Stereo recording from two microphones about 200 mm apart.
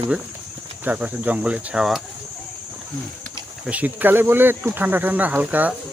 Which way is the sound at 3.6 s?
5° right (ahead or behind).